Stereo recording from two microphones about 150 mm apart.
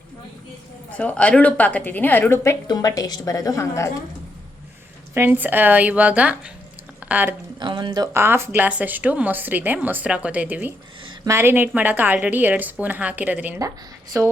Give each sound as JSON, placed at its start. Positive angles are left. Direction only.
{"t": 0.9, "sound": "a woman's voice", "side_deg": 10}
{"t": 5.1, "sound": "speech", "side_deg": -15}
{"t": 7.6, "sound": "speech", "side_deg": -30}
{"t": 13.6, "sound": "speech", "side_deg": -20}